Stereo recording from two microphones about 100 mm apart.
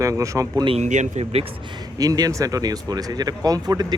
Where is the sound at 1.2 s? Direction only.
80° right.